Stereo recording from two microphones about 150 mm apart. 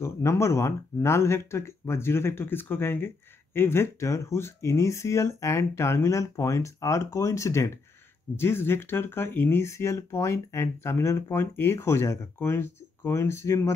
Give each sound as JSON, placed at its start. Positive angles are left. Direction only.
{"t": 0.0, "sound": "speech", "side_deg": 20}